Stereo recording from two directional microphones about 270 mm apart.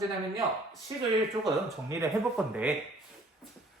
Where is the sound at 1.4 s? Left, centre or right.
Centre.